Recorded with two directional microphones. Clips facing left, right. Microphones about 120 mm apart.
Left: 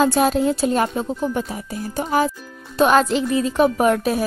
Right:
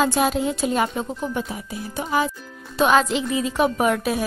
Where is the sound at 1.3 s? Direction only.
40° left (ahead or behind).